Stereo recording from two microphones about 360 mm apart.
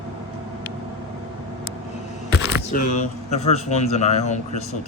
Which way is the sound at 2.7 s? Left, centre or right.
Left.